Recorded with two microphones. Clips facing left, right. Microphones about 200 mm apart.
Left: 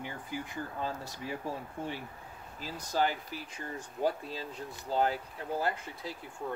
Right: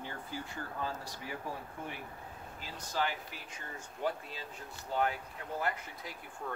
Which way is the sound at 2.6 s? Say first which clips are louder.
Left 5 dB; 40° left (ahead or behind).